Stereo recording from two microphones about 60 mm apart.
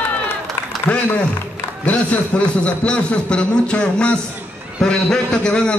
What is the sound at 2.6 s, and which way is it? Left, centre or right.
A man's voice, centre.